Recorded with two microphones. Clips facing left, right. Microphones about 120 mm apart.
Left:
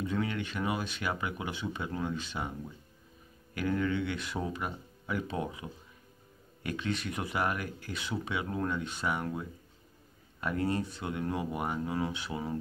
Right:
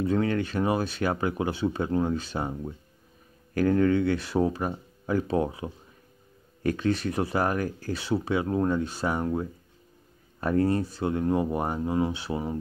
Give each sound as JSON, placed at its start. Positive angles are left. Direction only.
{"t": 0.0, "sound": "speech", "side_deg": -40}